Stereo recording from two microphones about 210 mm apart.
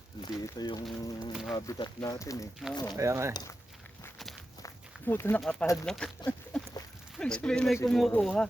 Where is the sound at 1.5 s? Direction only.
15° left (ahead or behind).